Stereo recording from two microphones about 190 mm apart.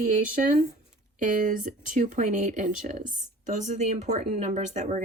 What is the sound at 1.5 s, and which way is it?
Speech, 40° right (ahead or behind).